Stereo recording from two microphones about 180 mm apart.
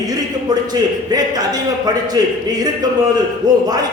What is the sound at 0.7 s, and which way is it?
A man's voice, 20° right (ahead or behind).